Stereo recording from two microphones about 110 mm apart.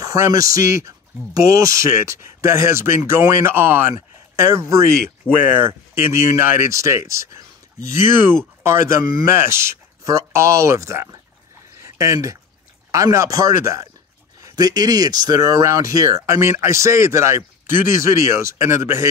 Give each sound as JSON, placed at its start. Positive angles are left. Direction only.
{"t": 0.0, "sound": "speech", "side_deg": -30}